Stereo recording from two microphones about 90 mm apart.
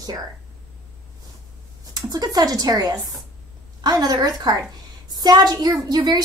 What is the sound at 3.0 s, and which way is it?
Speech, centre (ahead or behind).